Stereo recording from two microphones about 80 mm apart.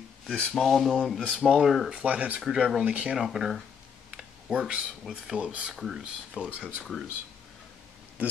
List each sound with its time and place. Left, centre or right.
0.3 s speech: centre
2.0 s speech: centre
2.4 s speech: centre
2.8 s speech: centre
3.3 s speech: centre
4.1 s computer keyboard: centre
5.0 s speech: centre
5.8 s speech: centre
6.3 s speech: centre
6.8 s speech: centre